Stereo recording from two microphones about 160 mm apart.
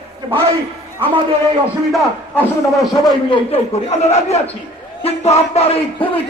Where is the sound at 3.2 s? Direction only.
30° left (ahead or behind).